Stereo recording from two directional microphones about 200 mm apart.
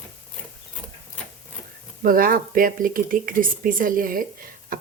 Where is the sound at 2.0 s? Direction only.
45° right (ahead or behind).